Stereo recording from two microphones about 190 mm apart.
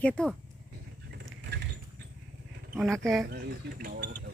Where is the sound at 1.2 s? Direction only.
65° right (ahead or behind).